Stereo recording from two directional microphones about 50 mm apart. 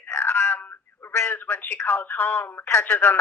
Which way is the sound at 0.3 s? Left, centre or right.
Left.